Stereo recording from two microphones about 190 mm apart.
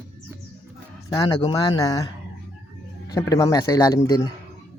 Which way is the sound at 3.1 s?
20° left (ahead or behind).